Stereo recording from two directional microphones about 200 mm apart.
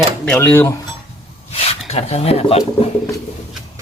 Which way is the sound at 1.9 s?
30° left (ahead or behind).